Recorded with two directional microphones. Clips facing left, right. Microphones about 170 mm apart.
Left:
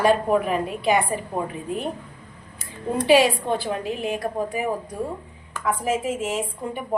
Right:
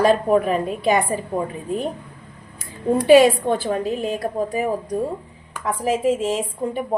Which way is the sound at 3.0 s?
45° right (ahead or behind).